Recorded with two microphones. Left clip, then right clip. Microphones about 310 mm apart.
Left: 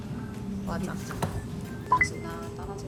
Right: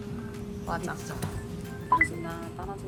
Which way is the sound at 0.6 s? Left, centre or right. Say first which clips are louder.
Right 3 dB; centre.